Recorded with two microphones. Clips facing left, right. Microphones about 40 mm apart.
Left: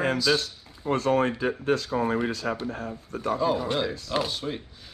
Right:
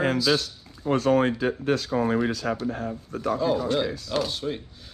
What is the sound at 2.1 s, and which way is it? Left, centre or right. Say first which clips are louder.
Speech: right 2 dB; right.